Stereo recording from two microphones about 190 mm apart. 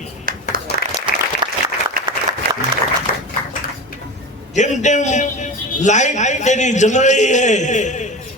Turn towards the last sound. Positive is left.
turn(degrees=40)  # may be behind; listen again after turning